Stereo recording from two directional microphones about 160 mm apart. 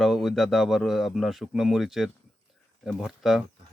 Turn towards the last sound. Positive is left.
turn(degrees=0)  # may be behind; listen again after turning